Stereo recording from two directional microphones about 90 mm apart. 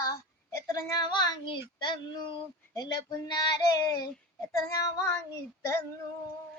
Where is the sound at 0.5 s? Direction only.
35° left (ahead or behind).